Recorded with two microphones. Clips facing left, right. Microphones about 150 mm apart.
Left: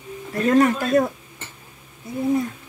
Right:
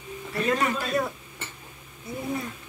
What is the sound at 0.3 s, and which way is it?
Speech, 50° left (ahead or behind).